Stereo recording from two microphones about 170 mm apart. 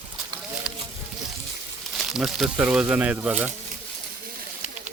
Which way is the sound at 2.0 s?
Centre (ahead or behind).